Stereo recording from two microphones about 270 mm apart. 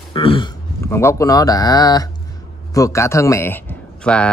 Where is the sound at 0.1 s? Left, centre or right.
Centre.